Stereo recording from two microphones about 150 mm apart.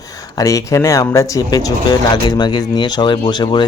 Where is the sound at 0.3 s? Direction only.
20° left (ahead or behind).